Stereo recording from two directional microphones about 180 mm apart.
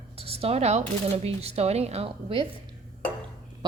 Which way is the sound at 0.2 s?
35° right (ahead or behind).